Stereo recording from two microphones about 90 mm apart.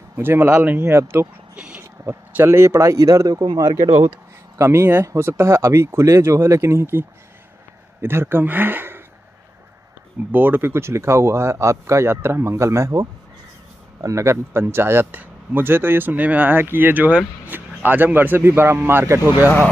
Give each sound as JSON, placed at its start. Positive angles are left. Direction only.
{"t": 0.1, "sound": "speech", "side_deg": -25}
{"t": 1.5, "sound": "a sound", "side_deg": -15}
{"t": 1.8, "sound": "speech", "side_deg": -25}
{"t": 4.6, "sound": "speech", "side_deg": -30}
{"t": 10.3, "sound": "speech", "side_deg": -20}